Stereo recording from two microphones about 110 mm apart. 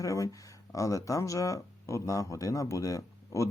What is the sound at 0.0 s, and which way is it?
Speech, 30° left (ahead or behind).